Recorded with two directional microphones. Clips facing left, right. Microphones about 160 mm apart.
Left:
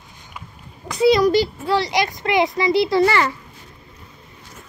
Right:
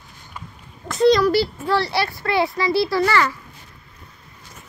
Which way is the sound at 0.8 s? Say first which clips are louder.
Even; centre (ahead or behind).